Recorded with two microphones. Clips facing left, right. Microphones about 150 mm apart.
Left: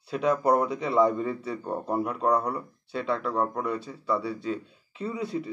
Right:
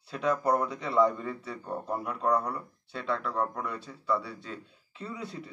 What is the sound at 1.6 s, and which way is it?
Speech, 25° left (ahead or behind).